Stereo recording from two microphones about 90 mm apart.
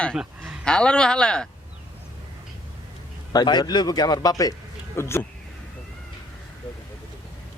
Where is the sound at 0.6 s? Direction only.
10° left (ahead or behind).